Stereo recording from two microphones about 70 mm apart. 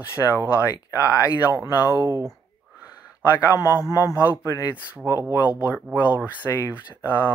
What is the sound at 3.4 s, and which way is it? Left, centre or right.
Speech, left.